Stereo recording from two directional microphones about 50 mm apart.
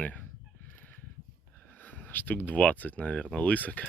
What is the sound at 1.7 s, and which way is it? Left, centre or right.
Speech, left.